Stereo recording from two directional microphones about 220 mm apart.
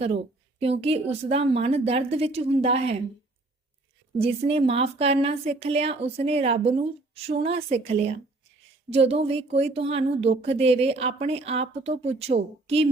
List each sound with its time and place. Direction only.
0.6 s speech: 25° right (ahead or behind)
4.2 s speech: 25° right (ahead or behind)